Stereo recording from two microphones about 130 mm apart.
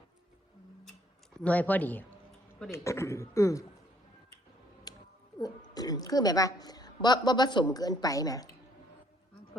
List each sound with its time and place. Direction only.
1.4 s speech: 10° left (ahead or behind)
4.9 s a sound: 30° left (ahead or behind)
5.7 s a woman's voice: 30° left (ahead or behind)